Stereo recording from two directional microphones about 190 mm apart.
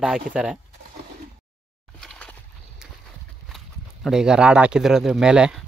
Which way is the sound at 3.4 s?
Centre (ahead or behind).